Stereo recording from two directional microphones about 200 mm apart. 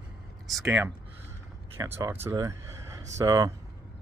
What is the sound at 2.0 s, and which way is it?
Speech, 10° right (ahead or behind).